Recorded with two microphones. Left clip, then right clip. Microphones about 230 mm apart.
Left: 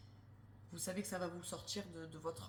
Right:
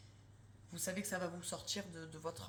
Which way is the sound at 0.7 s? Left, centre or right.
Right.